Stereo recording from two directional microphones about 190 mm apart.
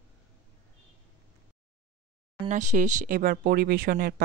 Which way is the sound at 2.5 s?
40° right (ahead or behind).